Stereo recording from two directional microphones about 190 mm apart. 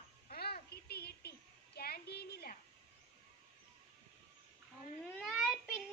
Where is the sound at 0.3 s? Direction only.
55° left (ahead or behind).